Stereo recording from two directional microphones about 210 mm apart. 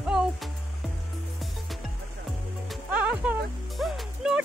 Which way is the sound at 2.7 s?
5° right (ahead or behind).